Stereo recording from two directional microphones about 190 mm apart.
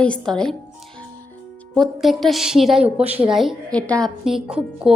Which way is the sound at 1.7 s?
Centre (ahead or behind).